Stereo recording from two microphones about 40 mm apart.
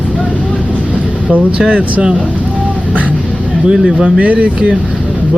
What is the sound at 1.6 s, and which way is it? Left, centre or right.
Speech, right.